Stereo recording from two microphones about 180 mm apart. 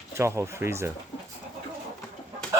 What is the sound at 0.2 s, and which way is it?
Speech, 15° right (ahead or behind).